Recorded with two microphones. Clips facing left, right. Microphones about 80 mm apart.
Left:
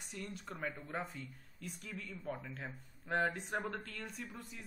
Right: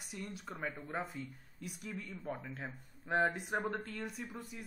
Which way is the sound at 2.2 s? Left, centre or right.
Centre.